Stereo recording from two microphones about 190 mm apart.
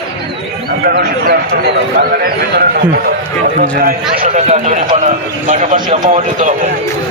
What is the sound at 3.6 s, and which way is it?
Speech, 50° right (ahead or behind).